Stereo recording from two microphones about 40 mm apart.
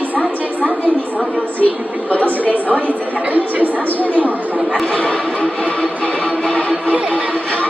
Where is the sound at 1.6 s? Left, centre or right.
Left.